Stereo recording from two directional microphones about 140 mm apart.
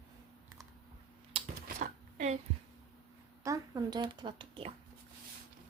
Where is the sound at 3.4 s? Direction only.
25° right (ahead or behind).